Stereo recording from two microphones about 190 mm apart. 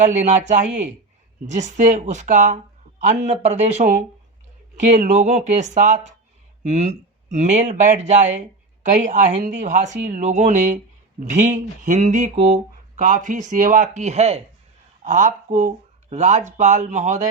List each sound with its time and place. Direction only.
0.0 s speech: 40° right (ahead or behind)
4.9 s speech: 35° right (ahead or behind)